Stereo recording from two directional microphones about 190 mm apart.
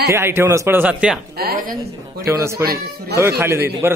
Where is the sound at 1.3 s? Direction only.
50° right (ahead or behind).